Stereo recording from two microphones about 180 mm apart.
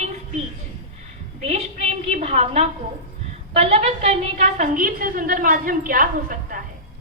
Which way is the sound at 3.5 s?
35° right (ahead or behind).